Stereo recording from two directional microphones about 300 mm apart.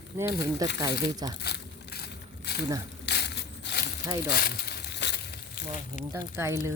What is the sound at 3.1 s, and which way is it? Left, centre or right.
Crushing, left.